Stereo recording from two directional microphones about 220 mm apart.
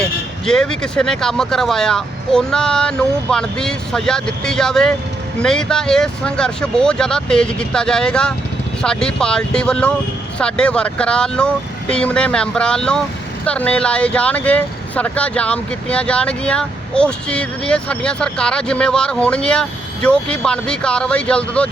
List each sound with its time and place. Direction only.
0.4 s speech: 5° left (ahead or behind)